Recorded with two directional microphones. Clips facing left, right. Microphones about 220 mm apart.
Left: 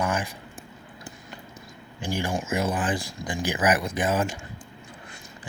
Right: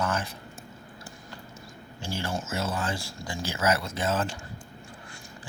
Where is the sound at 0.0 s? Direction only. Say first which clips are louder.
Left 2 dB; 15° left (ahead or behind).